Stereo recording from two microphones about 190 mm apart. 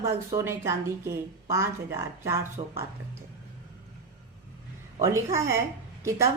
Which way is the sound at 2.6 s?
25° right (ahead or behind).